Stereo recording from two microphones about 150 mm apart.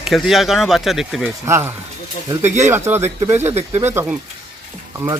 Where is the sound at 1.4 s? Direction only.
20° right (ahead or behind).